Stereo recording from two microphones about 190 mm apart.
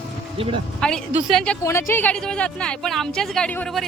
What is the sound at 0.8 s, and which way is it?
Speech, 5° left (ahead or behind).